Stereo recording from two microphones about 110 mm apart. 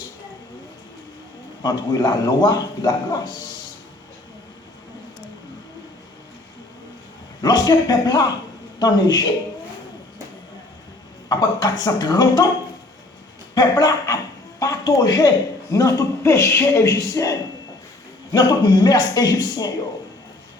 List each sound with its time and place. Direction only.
1.6 s a man's voice: 35° left (ahead or behind)
7.4 s a man's voice: 40° left (ahead or behind)
11.3 s a man's voice: 35° left (ahead or behind)
13.5 s speech: 35° left (ahead or behind)
14.6 s a sound: 35° left (ahead or behind)
15.7 s a man's voice: 30° left (ahead or behind)